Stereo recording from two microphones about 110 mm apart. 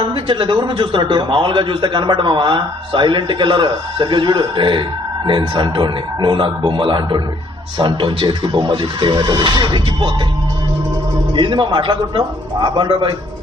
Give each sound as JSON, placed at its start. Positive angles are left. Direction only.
{"t": 0.0, "sound": "a man's voice", "side_deg": -50}
{"t": 11.3, "sound": "a man's voice", "side_deg": -45}